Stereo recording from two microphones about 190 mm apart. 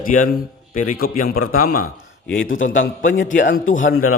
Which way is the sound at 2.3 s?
90° left.